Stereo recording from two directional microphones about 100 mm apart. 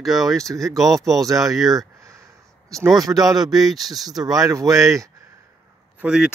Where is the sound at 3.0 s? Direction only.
40° right (ahead or behind).